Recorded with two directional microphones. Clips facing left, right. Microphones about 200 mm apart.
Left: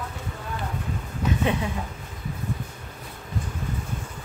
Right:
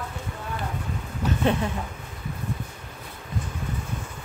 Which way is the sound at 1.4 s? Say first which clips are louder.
Right 3 dB; 10° left (ahead or behind).